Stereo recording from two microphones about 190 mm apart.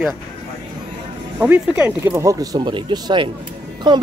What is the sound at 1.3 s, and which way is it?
Speech, 5° right (ahead or behind).